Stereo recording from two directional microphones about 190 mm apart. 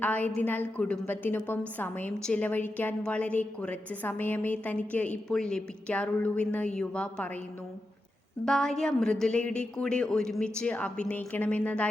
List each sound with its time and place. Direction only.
0.0 s a woman's voice: 10° left (ahead or behind)
8.4 s a woman's voice: centre (ahead or behind)